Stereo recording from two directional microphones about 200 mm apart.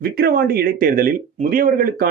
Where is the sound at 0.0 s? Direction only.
50° right (ahead or behind).